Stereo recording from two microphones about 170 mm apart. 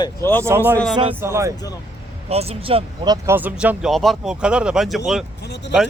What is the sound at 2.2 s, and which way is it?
Speech, 35° right (ahead or behind).